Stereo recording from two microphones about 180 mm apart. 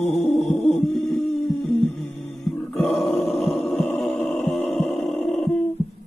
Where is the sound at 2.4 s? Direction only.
Centre (ahead or behind).